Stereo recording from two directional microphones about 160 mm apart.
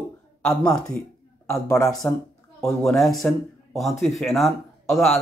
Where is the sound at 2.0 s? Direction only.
15° left (ahead or behind).